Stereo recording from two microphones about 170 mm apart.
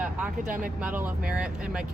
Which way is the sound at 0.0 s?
10° right (ahead or behind).